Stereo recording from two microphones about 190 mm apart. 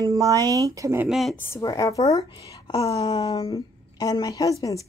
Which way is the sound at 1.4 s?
15° left (ahead or behind).